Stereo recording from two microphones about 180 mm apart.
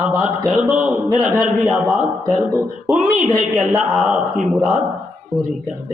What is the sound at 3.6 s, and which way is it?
A man's voice, 5° right (ahead or behind).